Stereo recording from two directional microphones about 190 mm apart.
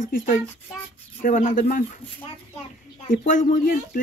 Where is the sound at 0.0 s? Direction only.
45° left (ahead or behind).